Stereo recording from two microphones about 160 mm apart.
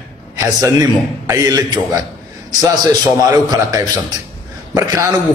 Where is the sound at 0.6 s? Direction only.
20° right (ahead or behind).